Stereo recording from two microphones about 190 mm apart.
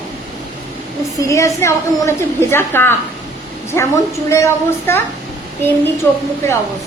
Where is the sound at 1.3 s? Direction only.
15° left (ahead or behind).